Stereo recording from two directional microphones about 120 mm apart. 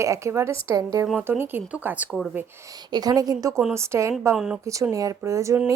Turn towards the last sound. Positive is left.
turn(degrees=-25)  # may be behind; listen again after turning